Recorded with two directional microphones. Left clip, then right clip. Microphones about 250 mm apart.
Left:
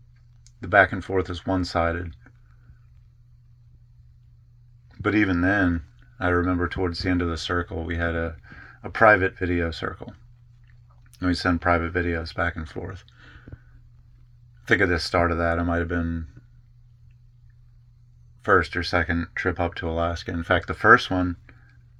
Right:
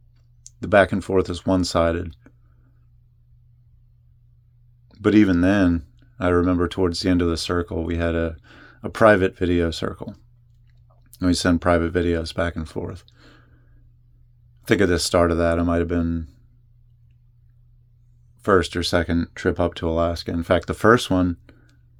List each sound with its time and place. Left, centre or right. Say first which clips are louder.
0.6 s speech: right 2 dB; right
4.9 s speech: right 5 dB; right
11.1 s a sound: right 4 dB; right
11.4 s speech: right 2 dB; right
14.6 s speech: right 2 dB; right
18.4 s speech: right 2 dB; right
20.8 s speech: left 1 dB; right